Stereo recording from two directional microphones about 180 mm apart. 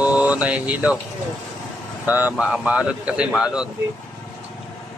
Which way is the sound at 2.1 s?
10° right (ahead or behind).